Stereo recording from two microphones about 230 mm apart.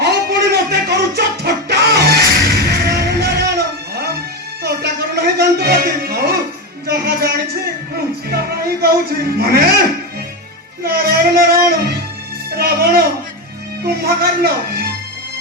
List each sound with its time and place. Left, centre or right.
0.0 s a sound: right
2.5 s music: right
4.6 s music: right
8.3 s a man's voice: right
10.8 s a sound: right
12.5 s music: right
13.8 s a man's voice: right